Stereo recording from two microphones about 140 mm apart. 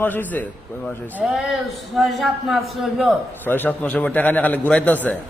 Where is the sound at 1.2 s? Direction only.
5° right (ahead or behind).